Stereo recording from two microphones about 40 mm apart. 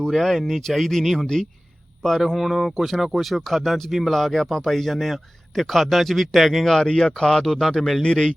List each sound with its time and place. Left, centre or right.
0.1 s a man's voice: centre
7.1 s speech: centre